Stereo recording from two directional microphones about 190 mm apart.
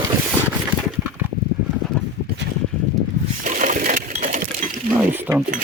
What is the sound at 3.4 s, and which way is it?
Coin, 40° right (ahead or behind).